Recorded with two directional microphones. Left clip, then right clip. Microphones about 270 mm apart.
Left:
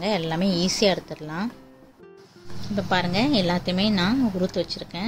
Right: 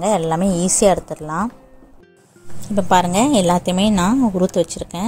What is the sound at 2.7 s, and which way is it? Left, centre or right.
A woman's voice, right.